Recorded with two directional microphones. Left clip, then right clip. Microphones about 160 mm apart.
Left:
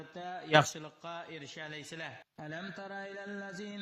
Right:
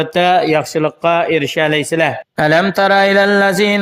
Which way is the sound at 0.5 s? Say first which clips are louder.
Right 12 dB; 30° right (ahead or behind).